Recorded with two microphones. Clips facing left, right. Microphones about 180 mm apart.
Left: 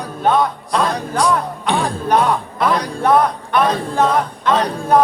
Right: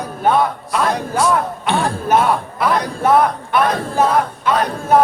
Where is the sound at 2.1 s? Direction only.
5° right (ahead or behind).